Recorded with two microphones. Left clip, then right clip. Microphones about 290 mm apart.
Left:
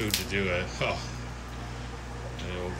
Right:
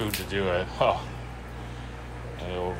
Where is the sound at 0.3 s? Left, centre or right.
Right.